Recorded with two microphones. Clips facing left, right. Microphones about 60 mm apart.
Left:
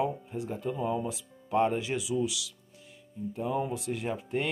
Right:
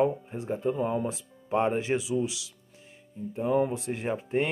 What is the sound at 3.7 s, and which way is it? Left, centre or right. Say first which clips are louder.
Speech: right 2 dB; right.